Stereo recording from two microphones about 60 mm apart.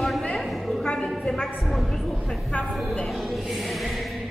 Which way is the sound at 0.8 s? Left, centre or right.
Centre.